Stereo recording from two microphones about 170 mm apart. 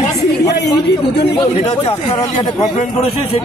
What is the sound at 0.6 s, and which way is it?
Speech, 75° left (ahead or behind).